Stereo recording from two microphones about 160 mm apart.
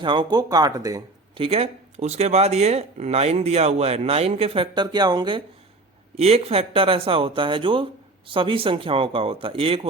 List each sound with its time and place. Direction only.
0.0 s speech: 30° right (ahead or behind)
1.4 s speech: 35° right (ahead or behind)
6.1 s speech: 40° right (ahead or behind)